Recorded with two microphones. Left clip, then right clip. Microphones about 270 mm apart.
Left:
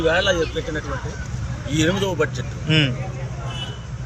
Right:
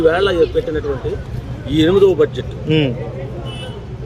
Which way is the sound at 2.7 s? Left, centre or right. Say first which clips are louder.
Right 3 dB; centre.